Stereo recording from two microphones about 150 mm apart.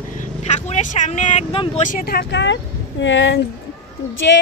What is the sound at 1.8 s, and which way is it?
Speech, 70° left (ahead or behind).